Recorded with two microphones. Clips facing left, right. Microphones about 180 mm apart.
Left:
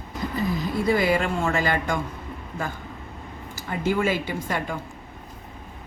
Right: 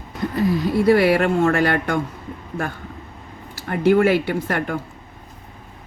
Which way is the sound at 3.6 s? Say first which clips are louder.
Right 8 dB; 60° right (ahead or behind).